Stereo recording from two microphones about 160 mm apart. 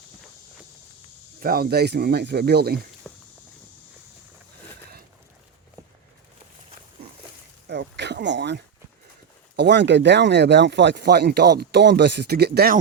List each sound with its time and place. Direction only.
1.4 s speech: 65° right (ahead or behind); by 2.8 s 85° right
3.1 s walk: 15° left (ahead or behind)
7.7 s a sound: 90° right
9.6 s speech: 90° right